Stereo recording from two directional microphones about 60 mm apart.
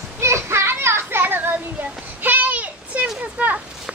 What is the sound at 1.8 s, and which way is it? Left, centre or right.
Child singing, right.